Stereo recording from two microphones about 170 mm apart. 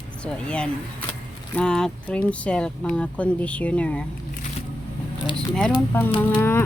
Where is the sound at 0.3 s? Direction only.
5° left (ahead or behind).